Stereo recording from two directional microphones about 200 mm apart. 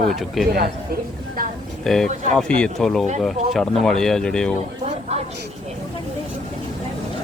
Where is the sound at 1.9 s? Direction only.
Centre (ahead or behind).